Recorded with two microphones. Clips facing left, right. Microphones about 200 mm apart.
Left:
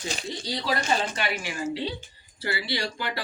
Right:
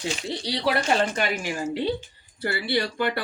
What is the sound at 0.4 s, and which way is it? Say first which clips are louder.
Speech: right 4 dB; 70° right (ahead or behind).